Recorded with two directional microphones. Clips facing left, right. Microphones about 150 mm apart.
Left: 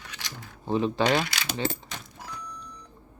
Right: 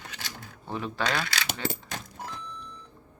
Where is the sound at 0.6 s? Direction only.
20° left (ahead or behind).